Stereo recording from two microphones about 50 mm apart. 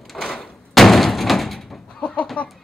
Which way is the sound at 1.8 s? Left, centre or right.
Left.